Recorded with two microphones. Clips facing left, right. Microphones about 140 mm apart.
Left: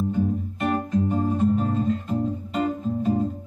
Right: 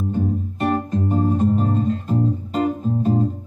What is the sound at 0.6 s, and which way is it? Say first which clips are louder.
Music: right 2 dB; 40° right (ahead or behind).